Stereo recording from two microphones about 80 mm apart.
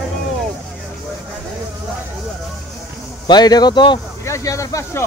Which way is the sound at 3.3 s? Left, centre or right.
Left.